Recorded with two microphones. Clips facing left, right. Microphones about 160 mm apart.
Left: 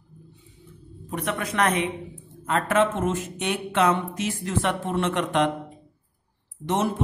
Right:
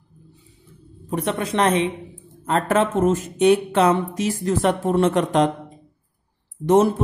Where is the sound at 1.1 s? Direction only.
30° right (ahead or behind).